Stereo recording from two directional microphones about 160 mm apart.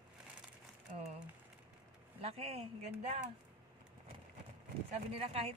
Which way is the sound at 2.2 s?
40° right (ahead or behind).